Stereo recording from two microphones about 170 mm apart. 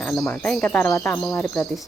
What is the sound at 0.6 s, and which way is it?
Speech, 10° left (ahead or behind).